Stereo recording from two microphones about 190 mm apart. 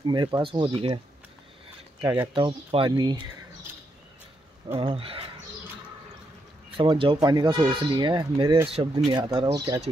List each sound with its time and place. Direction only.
0.0 s speech: 25° right (ahead or behind)
2.3 s speech: 25° right (ahead or behind)
4.7 s speech: 30° right (ahead or behind)
6.8 s speech: 25° right (ahead or behind)